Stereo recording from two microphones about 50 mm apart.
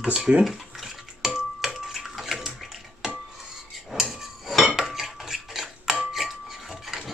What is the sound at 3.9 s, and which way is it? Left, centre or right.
Hammer, centre.